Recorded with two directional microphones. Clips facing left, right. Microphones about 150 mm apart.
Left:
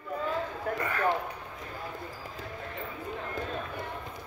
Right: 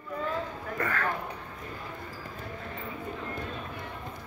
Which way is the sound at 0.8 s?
15° left (ahead or behind).